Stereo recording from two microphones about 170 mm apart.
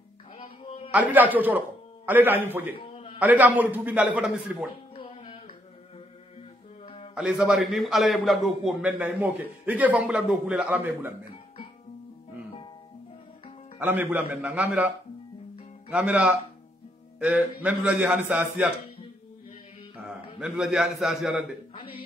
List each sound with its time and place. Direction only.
0.4 s music: 35° left (ahead or behind)
0.9 s a man's voice: 10° right (ahead or behind)
2.7 s a sound: 30° left (ahead or behind)
3.2 s a man's voice: 10° right (ahead or behind)
4.9 s music: 35° left (ahead or behind)
7.2 s a man's voice: 5° right (ahead or behind)
13.7 s a man's voice: 10° right (ahead or behind)
15.9 s a man's voice: 10° right (ahead or behind)
20.1 s a man's voice: 5° right (ahead or behind)
21.7 s speech: 30° left (ahead or behind)